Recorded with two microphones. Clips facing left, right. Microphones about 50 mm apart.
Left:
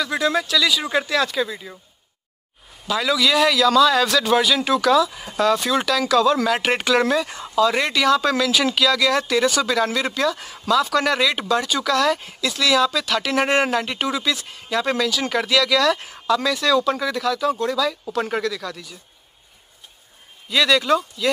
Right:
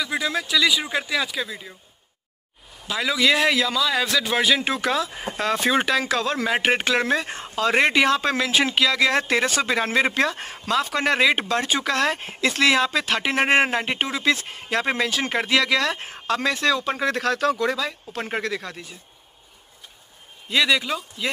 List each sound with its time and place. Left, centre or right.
0.0 s speech: centre
0.5 s speech: centre
2.9 s speech: centre
3.2 s speech: right
3.7 s speech: centre
4.4 s speech: right
17.0 s speech: right
18.4 s speech: right
20.4 s speech: centre